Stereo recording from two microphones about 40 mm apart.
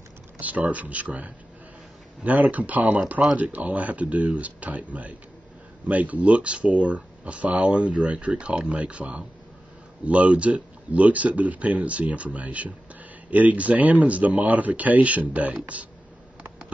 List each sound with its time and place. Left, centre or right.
0.4 s speech: right